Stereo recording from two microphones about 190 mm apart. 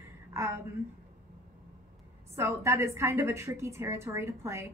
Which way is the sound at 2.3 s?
15° right (ahead or behind).